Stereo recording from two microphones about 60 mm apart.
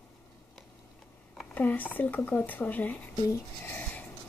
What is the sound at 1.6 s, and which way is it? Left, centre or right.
Speech, left.